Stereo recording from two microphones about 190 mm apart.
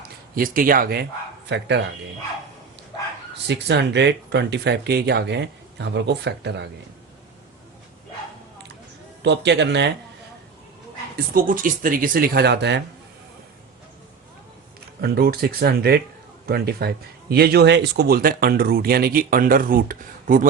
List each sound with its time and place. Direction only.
0.3 s speech: 45° right (ahead or behind)
1.5 s speech: 65° right (ahead or behind)
3.4 s speech: 65° right (ahead or behind)
9.2 s speech: 65° right (ahead or behind)
11.3 s speech: 45° right (ahead or behind); by 12.8 s 65° right (ahead or behind)
15.0 s speech: 55° right (ahead or behind)